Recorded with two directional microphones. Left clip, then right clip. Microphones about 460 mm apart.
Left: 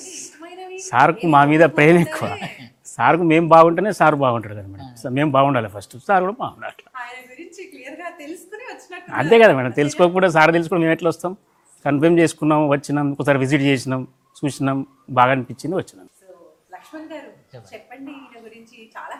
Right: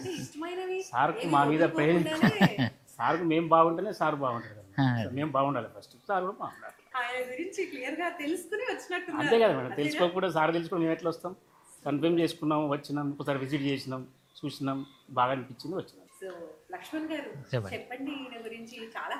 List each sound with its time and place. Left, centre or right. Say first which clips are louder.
0.9 s speech: left 14 dB; left
2.4 s speech: right 6 dB; right
3.0 s speech: left 12 dB; left
9.1 s speech: left 13 dB; left
17.5 s speech: right 14 dB; right